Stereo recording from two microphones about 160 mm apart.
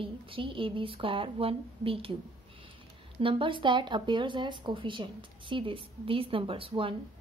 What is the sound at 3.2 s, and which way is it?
Speech, 30° right (ahead or behind).